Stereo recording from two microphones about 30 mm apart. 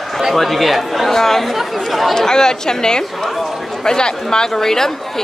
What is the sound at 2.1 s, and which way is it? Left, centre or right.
Speech, left.